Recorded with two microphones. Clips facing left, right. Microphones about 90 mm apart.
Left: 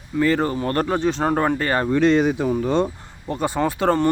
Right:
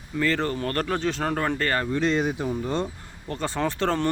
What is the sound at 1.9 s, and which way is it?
Speech, 65° left (ahead or behind).